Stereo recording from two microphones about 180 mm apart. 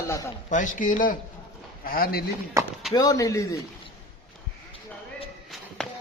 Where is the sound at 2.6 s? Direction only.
15° right (ahead or behind).